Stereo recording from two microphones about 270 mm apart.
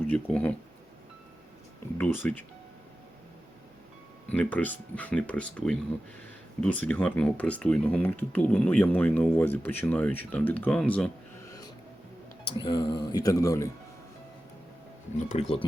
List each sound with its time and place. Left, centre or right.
0.0 s speech: centre
2.0 s a man's voice: centre
4.3 s speech: centre
12.5 s a man's voice: centre
15.3 s speech: left